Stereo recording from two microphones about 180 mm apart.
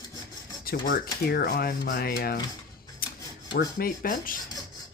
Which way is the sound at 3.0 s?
55° left (ahead or behind).